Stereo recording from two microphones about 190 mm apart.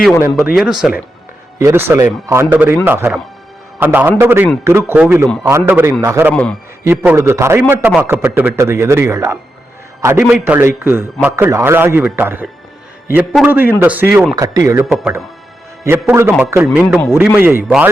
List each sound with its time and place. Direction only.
0.8 s a man's voice: 5° right (ahead or behind)
6.3 s a man's voice: 5° left (ahead or behind)
6.8 s a man's voice: 10° right (ahead or behind)
14.8 s a man's voice: centre (ahead or behind)
15.8 s a man's voice: 10° right (ahead or behind)
16.9 s a man's voice: 5° left (ahead or behind)
17.2 s a man's voice: 10° right (ahead or behind)